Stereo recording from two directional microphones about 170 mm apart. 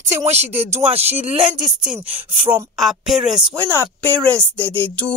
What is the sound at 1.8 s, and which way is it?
Speech, 10° right (ahead or behind).